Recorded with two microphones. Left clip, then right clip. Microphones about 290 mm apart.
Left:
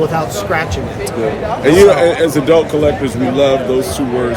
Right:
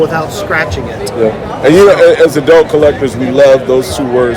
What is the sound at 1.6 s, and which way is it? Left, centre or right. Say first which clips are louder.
Speech: right 4 dB; centre.